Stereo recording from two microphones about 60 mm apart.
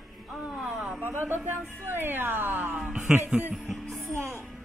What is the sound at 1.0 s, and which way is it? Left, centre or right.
A woman's voice, right.